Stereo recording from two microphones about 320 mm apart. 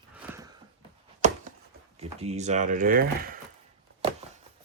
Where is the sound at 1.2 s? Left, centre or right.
Right.